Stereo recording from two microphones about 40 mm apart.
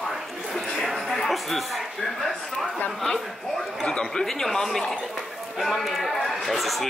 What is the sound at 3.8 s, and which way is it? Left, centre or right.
Speech, centre.